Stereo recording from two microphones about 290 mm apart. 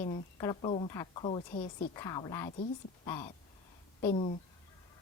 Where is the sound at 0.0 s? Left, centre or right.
Centre.